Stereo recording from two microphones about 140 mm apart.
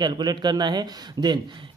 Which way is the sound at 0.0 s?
30° right (ahead or behind).